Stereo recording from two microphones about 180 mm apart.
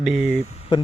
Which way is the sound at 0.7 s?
25° left (ahead or behind).